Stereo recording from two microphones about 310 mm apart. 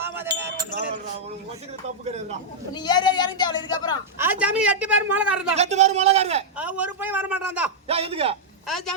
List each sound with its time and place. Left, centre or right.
0.0 s a sound: centre
2.7 s speech: centre
4.2 s a woman's voice: centre
5.5 s a man's voice: right
6.6 s a woman's voice: centre
7.9 s a man's voice: centre
8.6 s a woman's voice: centre